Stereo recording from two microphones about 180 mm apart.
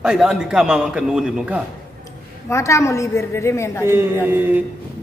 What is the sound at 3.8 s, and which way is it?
Speech, 10° right (ahead or behind).